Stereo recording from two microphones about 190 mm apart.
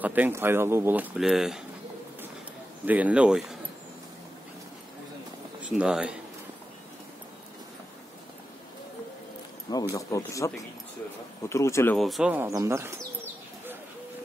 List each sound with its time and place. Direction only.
0.0 s speech: 10° right (ahead or behind)
2.8 s speech: 10° right (ahead or behind)
5.6 s speech: 5° right (ahead or behind)
9.9 s speech: 15° left (ahead or behind)
12.0 s bird: centre (ahead or behind)